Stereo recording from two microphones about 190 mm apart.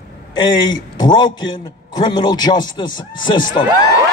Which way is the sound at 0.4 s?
25° left (ahead or behind).